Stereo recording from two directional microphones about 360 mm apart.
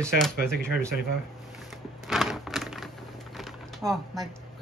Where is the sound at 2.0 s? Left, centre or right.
Centre.